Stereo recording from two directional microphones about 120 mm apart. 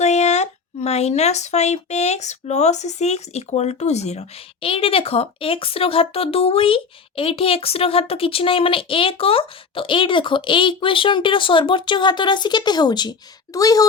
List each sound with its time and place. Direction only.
0.0 s speech: 70° left (ahead or behind)
4.6 s speech: 50° left (ahead or behind); by 13.8 s 30° left (ahead or behind)